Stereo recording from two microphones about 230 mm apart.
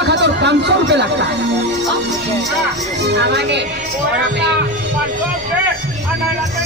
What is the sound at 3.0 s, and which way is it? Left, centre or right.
Speech, right.